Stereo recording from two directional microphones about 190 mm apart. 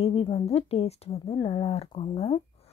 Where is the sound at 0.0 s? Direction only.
30° left (ahead or behind).